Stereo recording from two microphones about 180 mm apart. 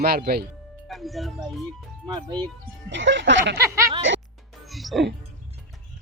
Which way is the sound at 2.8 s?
85° right.